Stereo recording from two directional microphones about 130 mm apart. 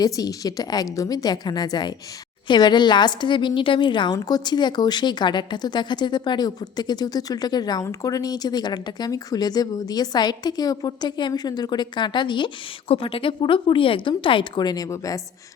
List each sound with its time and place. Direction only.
0.0 s a woman's voice: 30° left (ahead or behind)